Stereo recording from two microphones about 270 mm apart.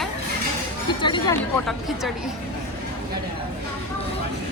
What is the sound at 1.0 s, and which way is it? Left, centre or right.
Speech, centre.